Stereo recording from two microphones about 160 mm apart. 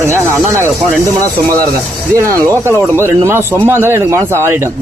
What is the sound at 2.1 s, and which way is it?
Speech, 20° right (ahead or behind).